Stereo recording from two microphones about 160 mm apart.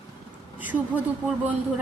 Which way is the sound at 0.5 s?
10° right (ahead or behind).